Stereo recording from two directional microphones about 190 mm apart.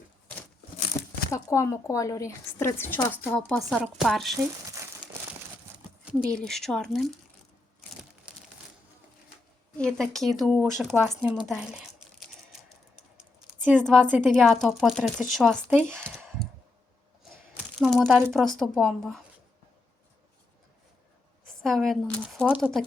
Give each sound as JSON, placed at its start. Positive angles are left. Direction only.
{"t": 0.9, "sound": "a sound", "side_deg": 25}
{"t": 1.3, "sound": "a woman's voice", "side_deg": 15}
{"t": 4.4, "sound": "speech", "side_deg": -15}
{"t": 6.1, "sound": "speech", "side_deg": 5}
{"t": 9.7, "sound": "speech", "side_deg": 5}
{"t": 11.3, "sound": "a sound", "side_deg": -5}
{"t": 13.7, "sound": "speech", "side_deg": 5}
{"t": 15.8, "sound": "a sound", "side_deg": 5}
{"t": 17.7, "sound": "speech", "side_deg": 0}
{"t": 21.6, "sound": "speech", "side_deg": 0}